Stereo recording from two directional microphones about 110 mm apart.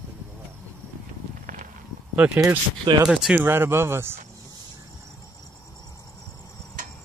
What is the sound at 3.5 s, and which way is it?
Speech, 20° right (ahead or behind).